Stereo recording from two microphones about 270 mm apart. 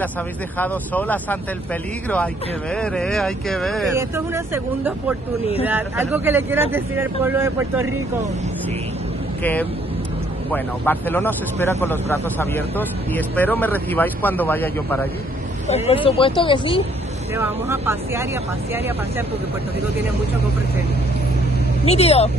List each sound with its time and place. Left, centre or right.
0.6 s speech: centre
2.7 s speech: centre
3.9 s speech: centre
5.7 s speech: centre
9.4 s speech: centre
15.7 s speech: left
17.3 s speech: centre
21.8 s speech: left